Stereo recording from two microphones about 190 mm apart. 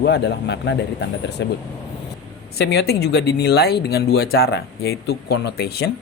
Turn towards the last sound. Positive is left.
turn(degrees=55)  # may be behind; listen again after turning